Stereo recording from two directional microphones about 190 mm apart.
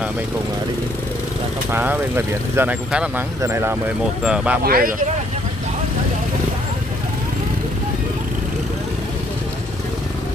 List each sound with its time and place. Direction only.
1.7 s speech: 10° right (ahead or behind)
4.6 s speech: 50° right (ahead or behind)